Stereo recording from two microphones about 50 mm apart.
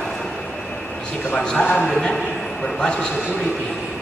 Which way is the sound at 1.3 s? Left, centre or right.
Left.